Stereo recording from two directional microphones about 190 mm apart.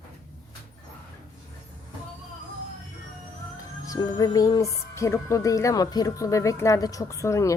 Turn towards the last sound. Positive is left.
turn(degrees=15)  # may be behind; listen again after turning